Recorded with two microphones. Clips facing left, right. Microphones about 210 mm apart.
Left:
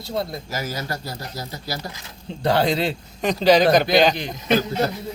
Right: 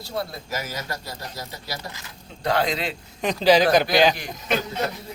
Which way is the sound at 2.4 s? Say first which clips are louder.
Left 4 dB; 30° left (ahead or behind).